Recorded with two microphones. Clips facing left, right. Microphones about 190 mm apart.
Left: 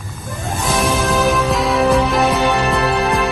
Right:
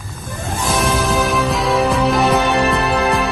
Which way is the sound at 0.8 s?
Centre (ahead or behind).